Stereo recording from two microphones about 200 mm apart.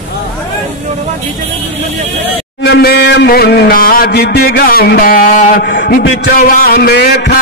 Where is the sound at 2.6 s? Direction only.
55° left (ahead or behind).